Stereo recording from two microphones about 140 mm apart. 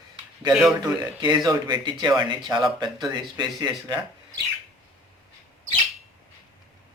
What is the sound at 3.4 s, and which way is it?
Speech, 30° right (ahead or behind).